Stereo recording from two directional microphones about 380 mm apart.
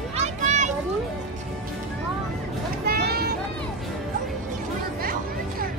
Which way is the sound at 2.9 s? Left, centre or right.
Right.